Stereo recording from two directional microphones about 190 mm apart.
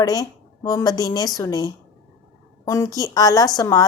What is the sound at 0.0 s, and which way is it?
A woman's voice, 20° left (ahead or behind).